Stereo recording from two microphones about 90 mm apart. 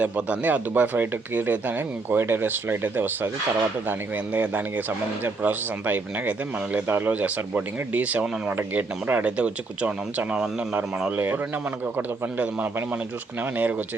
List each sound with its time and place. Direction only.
0.0 s speech: 15° right (ahead or behind)
11.9 s speech: 15° right (ahead or behind)